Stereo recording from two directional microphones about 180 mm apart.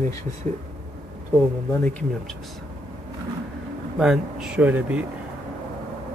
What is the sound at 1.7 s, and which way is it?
Speech, 5° left (ahead or behind).